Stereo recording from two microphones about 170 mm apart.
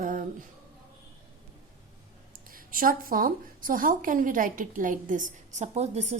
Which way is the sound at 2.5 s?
55° right (ahead or behind).